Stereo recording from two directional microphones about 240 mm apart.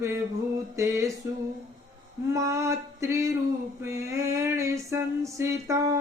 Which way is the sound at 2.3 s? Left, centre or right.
Centre.